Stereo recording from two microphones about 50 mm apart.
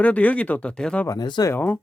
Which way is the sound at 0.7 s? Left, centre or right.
Centre.